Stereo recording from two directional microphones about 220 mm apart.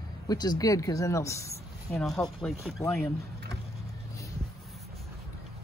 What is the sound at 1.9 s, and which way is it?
Speech, centre (ahead or behind).